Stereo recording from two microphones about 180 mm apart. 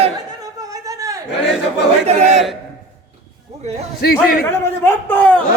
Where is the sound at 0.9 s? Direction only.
20° right (ahead or behind).